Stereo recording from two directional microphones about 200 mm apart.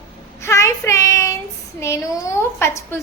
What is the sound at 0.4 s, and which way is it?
Child singing, 15° left (ahead or behind).